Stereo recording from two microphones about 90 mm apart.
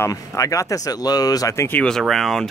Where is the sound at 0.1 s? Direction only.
40° left (ahead or behind).